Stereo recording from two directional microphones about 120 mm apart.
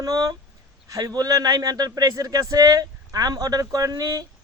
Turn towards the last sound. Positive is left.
turn(degrees=-30)  # may be behind; listen again after turning